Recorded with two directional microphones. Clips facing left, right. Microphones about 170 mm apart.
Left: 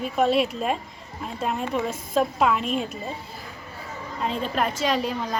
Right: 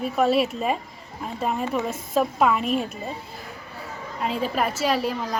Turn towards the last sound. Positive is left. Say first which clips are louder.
# right 1 dB
turn(degrees=-5)  # may be behind; listen again after turning